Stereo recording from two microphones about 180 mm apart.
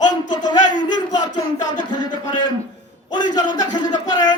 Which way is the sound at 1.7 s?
25° left (ahead or behind).